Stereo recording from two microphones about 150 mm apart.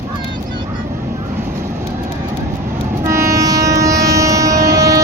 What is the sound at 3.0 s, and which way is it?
Train, 20° right (ahead or behind).